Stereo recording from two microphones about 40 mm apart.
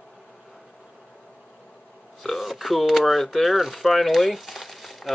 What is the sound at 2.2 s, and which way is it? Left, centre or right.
Speech, centre.